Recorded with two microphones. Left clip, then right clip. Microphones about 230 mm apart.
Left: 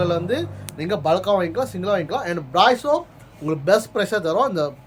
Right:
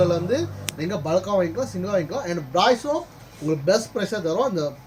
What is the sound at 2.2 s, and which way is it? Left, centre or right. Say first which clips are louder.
Speech: left 4 dB; left.